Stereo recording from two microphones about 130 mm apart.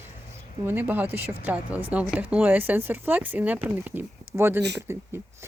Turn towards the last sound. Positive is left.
turn(degrees=-20)  # may be behind; listen again after turning